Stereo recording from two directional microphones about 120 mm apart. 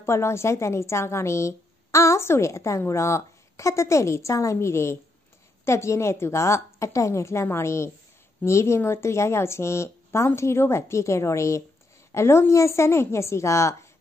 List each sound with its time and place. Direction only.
0.0 s a woman's voice: 20° left (ahead or behind)